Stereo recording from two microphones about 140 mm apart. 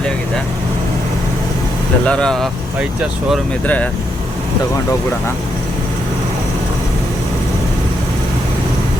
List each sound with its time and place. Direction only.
2.0 s speech: 5° left (ahead or behind)